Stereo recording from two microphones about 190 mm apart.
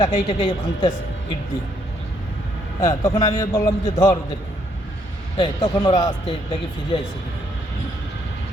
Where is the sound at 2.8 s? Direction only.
15° left (ahead or behind).